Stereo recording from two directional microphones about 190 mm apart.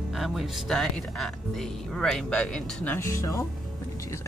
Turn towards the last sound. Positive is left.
turn(degrees=15)  # may be behind; listen again after turning